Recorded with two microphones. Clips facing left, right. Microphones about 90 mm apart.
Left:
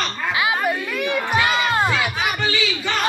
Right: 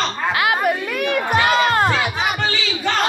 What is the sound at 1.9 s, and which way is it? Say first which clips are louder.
Music: right 2 dB; 30° right (ahead or behind).